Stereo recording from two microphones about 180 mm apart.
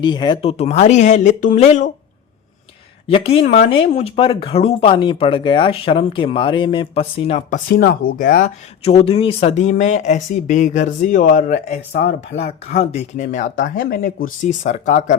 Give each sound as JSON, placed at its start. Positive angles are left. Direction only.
{"t": 0.0, "sound": "speech", "side_deg": 25}
{"t": 0.5, "sound": "speech", "side_deg": 35}
{"t": 3.1, "sound": "speech", "side_deg": 35}
{"t": 7.7, "sound": "speech", "side_deg": 55}
{"t": 8.8, "sound": "speech", "side_deg": 35}
{"t": 11.9, "sound": "speech", "side_deg": 65}
{"t": 12.8, "sound": "speech", "side_deg": 40}
{"t": 14.4, "sound": "speech", "side_deg": 45}